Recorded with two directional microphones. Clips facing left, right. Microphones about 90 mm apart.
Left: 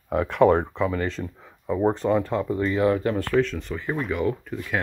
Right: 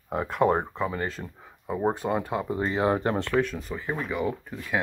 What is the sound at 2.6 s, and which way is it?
Speech, 30° right (ahead or behind).